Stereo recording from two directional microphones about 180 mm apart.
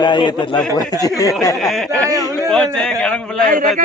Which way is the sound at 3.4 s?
50° right (ahead or behind).